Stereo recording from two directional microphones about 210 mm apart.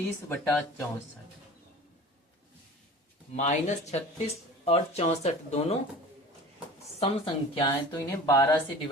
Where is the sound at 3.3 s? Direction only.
35° left (ahead or behind).